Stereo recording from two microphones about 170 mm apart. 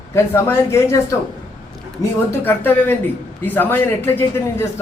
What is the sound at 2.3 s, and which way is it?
Speech, 10° left (ahead or behind).